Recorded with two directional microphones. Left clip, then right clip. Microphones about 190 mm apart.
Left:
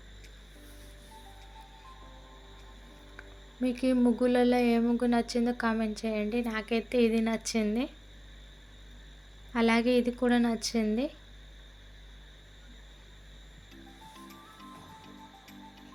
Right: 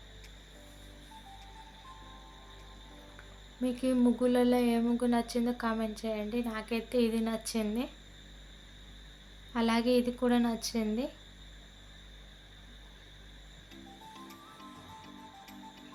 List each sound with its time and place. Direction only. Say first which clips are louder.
3.6 s speech: left 2 dB; 20° left (ahead or behind)
9.5 s speech: left 3 dB; 15° left (ahead or behind)
14.1 s music: even; centre (ahead or behind)